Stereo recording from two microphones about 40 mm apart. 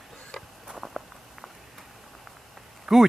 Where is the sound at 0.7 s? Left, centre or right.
Centre.